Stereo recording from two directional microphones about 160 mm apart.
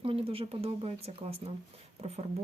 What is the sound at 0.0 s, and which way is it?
Speech, 35° right (ahead or behind).